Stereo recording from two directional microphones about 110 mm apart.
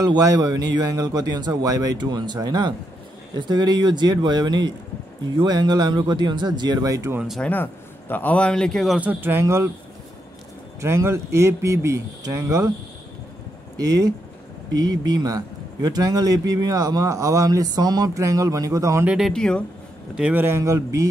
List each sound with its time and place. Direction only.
0.0 s a man's voice: 35° right (ahead or behind)
7.2 s speech: centre (ahead or behind)
7.4 s a man's voice: 15° left (ahead or behind); by 9.0 s centre (ahead or behind)
9.0 s speech: 20° right (ahead or behind)
10.8 s speech: 25° right (ahead or behind)
14.8 s a man's voice: 40° right (ahead or behind)
19.0 s speech: centre (ahead or behind)
20.2 s speech: 15° right (ahead or behind); by 21.1 s 30° right (ahead or behind)